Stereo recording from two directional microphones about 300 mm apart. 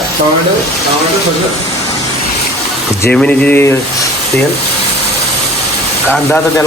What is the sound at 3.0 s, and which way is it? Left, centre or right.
Speech, centre.